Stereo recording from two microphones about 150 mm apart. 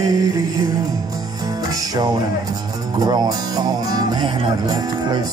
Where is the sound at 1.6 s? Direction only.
25° right (ahead or behind).